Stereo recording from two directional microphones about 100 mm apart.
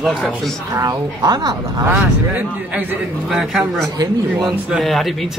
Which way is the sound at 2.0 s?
15° right (ahead or behind).